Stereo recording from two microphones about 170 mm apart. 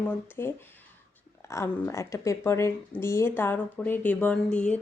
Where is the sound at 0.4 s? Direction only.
15° left (ahead or behind).